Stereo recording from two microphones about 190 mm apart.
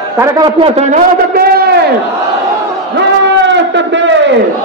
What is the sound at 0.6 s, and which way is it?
A man's voice, 35° right (ahead or behind).